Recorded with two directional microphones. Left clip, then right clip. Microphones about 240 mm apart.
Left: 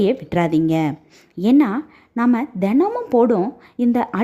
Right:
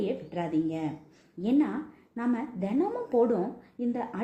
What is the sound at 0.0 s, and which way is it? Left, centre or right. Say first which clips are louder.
A woman's voice: left 13 dB; left.